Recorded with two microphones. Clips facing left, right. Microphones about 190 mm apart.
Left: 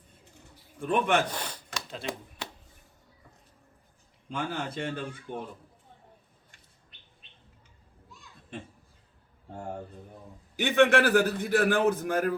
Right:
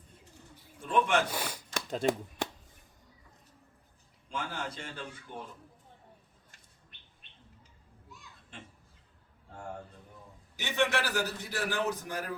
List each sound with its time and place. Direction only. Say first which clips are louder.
0.8 s a man's voice: left 2 dB; 55° left (ahead or behind)
1.3 s speech: even; 10° right (ahead or behind)
1.7 s shuffling cards: right 8 dB; 45° right (ahead or behind)
4.3 s a man's voice: left 4 dB; 60° left (ahead or behind)
10.6 s a man's voice: left 9 dB; 55° left (ahead or behind)